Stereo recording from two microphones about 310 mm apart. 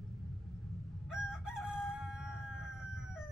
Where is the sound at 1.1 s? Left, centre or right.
Centre.